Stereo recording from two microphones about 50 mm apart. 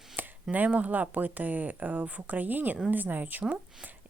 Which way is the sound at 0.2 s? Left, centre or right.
Right.